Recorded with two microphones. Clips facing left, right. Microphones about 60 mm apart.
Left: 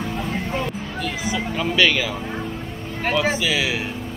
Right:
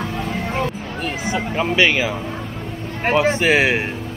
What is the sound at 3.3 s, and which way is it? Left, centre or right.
Speech, right.